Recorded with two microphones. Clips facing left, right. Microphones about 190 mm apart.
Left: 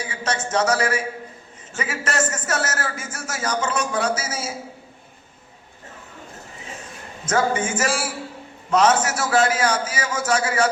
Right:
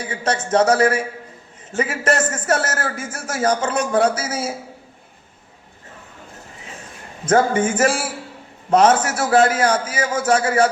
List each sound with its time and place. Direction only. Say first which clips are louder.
0.2 s a man's voice: right 5 dB; 55° right (ahead or behind)
7.3 s a man's voice: right 5 dB; 55° right (ahead or behind)